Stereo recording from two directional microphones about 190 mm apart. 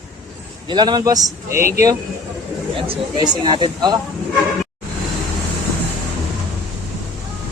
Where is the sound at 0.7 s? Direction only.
20° right (ahead or behind).